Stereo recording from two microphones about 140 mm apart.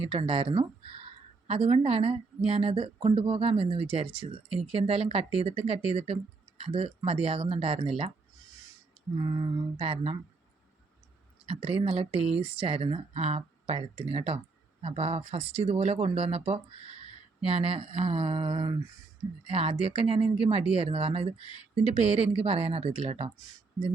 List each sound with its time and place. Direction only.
0.0 s speech: 40° right (ahead or behind)
9.1 s speech: 30° right (ahead or behind)
11.4 s speech: 45° right (ahead or behind)